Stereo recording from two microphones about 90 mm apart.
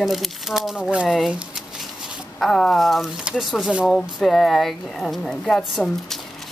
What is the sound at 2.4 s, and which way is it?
Speech, 5° left (ahead or behind).